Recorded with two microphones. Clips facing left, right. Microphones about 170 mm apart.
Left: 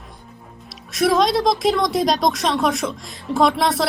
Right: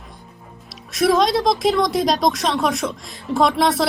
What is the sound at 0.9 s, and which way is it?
Speech, centre (ahead or behind).